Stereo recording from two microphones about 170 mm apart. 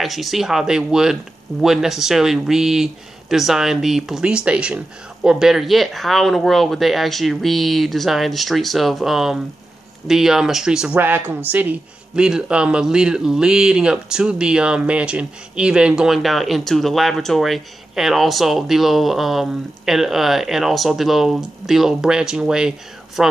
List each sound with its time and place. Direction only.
0.0 s speech: centre (ahead or behind)